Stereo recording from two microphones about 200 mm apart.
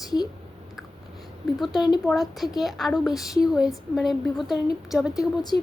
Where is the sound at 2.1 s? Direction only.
Centre (ahead or behind).